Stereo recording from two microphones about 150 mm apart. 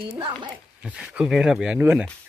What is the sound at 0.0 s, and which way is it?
Speech, 35° right (ahead or behind).